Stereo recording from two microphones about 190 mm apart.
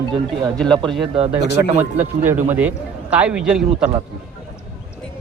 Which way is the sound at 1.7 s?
35° right (ahead or behind).